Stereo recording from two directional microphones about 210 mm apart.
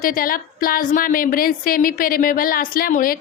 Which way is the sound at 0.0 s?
40° left (ahead or behind).